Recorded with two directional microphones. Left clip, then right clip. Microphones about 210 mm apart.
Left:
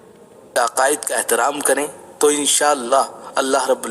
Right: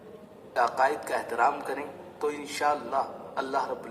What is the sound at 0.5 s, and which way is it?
Speech, 45° left (ahead or behind).